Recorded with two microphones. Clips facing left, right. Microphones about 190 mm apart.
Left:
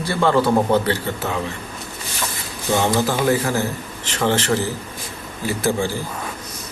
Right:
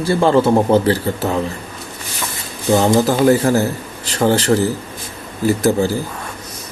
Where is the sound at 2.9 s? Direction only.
45° right (ahead or behind).